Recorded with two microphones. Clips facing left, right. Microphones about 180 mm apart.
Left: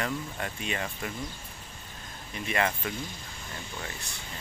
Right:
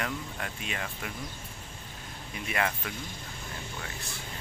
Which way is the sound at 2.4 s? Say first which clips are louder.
Left 3 dB; centre (ahead or behind).